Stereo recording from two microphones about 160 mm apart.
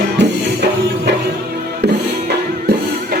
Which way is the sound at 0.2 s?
90° right.